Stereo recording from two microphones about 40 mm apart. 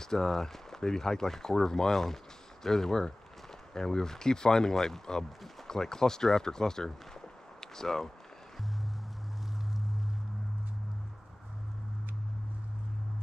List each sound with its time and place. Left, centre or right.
0.0 s speech: centre